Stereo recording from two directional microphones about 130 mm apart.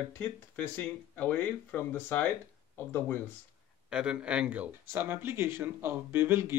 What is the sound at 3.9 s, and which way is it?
Speech, 5° right (ahead or behind).